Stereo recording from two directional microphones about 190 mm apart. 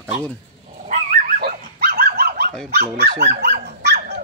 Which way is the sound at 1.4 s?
50° right (ahead or behind).